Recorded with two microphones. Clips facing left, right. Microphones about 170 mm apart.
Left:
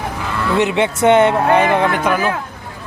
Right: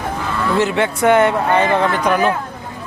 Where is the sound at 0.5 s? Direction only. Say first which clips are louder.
Left 2 dB; 20° left (ahead or behind).